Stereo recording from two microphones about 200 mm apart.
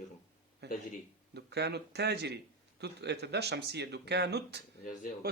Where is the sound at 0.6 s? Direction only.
55° right (ahead or behind).